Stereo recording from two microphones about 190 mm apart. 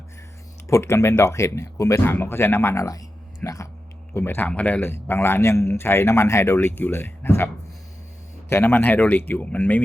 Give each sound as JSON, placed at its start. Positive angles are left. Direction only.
{"t": 0.7, "sound": "a man's voice", "side_deg": 15}